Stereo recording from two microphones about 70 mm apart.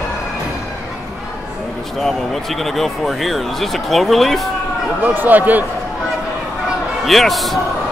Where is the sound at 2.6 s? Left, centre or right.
Centre.